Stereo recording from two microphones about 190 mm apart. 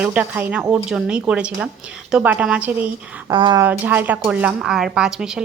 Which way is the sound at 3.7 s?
10° right (ahead or behind).